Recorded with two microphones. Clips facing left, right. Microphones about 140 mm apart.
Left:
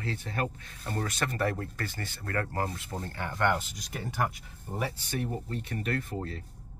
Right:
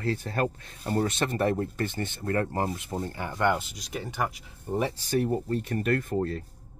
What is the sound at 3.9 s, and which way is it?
Speech, centre (ahead or behind).